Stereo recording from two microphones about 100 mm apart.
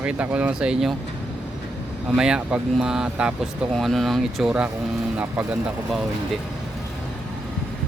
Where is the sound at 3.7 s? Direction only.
Centre (ahead or behind).